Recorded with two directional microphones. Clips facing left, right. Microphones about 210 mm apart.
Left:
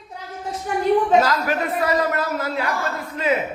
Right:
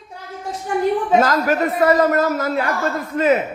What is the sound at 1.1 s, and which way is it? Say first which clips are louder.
A man's voice: right 3 dB; 45° right (ahead or behind).